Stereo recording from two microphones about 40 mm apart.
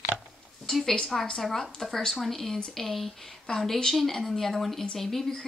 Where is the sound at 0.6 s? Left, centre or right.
Centre.